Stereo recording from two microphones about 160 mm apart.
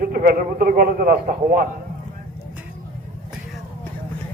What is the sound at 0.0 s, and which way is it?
A man's voice, 60° right (ahead or behind).